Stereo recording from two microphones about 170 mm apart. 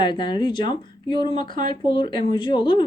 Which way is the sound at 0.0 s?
30° left (ahead or behind).